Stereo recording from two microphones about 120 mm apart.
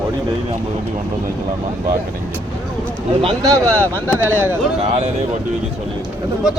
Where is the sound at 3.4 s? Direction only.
25° right (ahead or behind).